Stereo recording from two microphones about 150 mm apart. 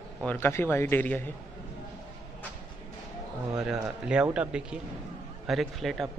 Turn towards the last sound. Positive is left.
turn(degrees=0)  # may be behind; listen again after turning